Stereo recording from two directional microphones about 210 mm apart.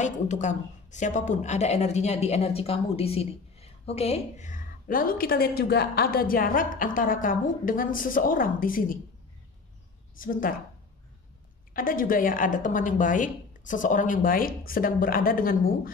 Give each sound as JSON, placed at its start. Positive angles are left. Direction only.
{"t": 0.0, "sound": "a woman's voice", "side_deg": 35}
{"t": 10.1, "sound": "a woman's voice", "side_deg": 40}
{"t": 11.7, "sound": "a woman's voice", "side_deg": 40}